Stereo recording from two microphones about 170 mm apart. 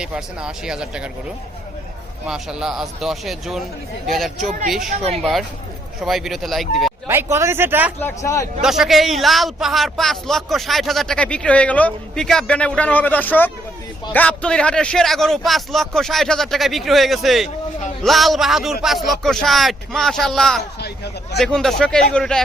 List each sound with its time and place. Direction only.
0.0 s a man's voice: 5° right (ahead or behind)
2.2 s a man's voice: 5° right (ahead or behind)
4.9 s speech: 40° right (ahead or behind)
5.2 s a man's voice: centre (ahead or behind)
7.1 s speech: 15° right (ahead or behind)
8.0 s speech: 15° left (ahead or behind)
8.6 s a man's voice: centre (ahead or behind)
20.7 s speech: 75° left (ahead or behind)
21.3 s a man's voice: 5° left (ahead or behind)